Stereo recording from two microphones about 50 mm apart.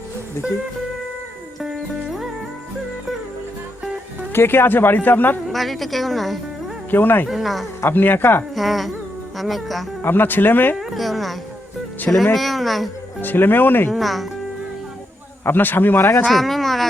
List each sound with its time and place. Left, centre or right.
4.3 s speech: left
5.5 s a woman's voice: centre
6.9 s speech: left
7.3 s a woman's voice: centre
7.8 s speech: left
8.5 s a woman's voice: centre
10.0 s speech: left
10.8 s a woman's voice: centre
13.2 s speech: left
13.9 s a woman's voice: centre
15.4 s speech: left
16.0 s speech: left
16.3 s a sound: centre